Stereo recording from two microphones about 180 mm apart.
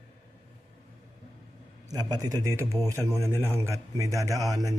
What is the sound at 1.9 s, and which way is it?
A man's voice, 20° right (ahead or behind).